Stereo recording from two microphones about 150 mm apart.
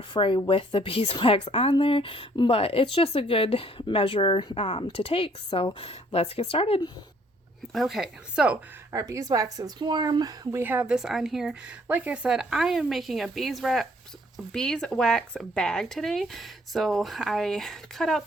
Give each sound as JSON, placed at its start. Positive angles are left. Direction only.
{"t": 0.1, "sound": "a woman's voice", "side_deg": 35}
{"t": 7.7, "sound": "speech", "side_deg": 0}
{"t": 8.9, "sound": "a woman's voice", "side_deg": -20}